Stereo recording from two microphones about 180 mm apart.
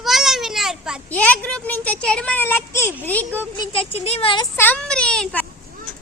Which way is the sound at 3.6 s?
30° left (ahead or behind).